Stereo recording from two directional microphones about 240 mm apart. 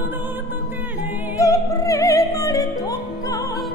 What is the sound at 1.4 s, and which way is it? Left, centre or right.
Music, centre.